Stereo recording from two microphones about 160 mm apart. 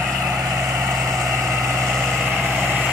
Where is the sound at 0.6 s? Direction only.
20° right (ahead or behind).